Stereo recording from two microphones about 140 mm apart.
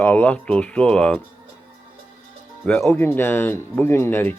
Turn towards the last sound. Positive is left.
turn(degrees=15)  # may be behind; listen again after turning